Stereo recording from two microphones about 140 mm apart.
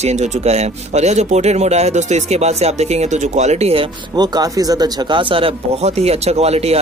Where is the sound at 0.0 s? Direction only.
55° right (ahead or behind).